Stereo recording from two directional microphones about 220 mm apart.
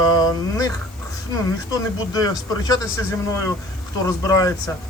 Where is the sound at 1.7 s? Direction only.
15° left (ahead or behind).